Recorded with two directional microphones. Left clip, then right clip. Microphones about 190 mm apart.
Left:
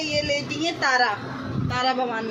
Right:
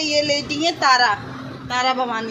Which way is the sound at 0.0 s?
45° right (ahead or behind).